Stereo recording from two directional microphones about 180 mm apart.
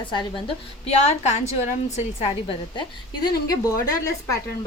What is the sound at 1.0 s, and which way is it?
Speech, 35° left (ahead or behind).